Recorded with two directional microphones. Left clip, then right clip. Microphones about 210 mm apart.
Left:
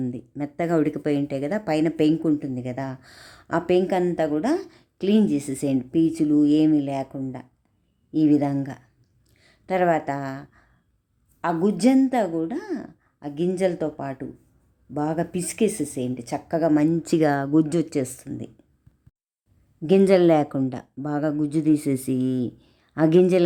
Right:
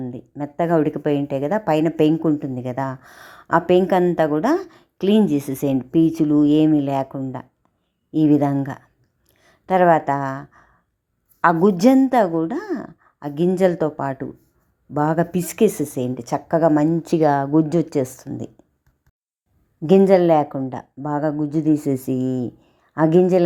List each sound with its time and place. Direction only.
0.1 s speech: centre (ahead or behind)
9.3 s a sound: 15° right (ahead or behind)
11.3 s speech: 20° right (ahead or behind)
16.9 s speech: 5° left (ahead or behind); by 18.6 s 15° right (ahead or behind)
20.0 s speech: 5° left (ahead or behind)